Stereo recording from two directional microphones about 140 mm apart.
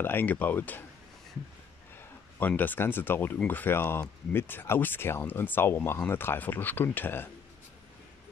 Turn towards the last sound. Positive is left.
turn(degrees=15)  # may be behind; listen again after turning